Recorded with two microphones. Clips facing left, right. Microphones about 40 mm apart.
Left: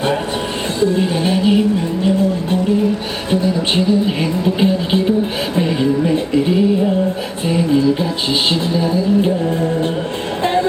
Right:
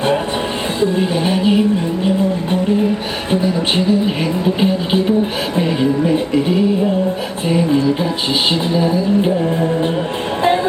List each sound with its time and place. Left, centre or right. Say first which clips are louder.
0.8 s music: left 1 dB; centre
3.4 s music: even; centre
7.4 s music: even; centre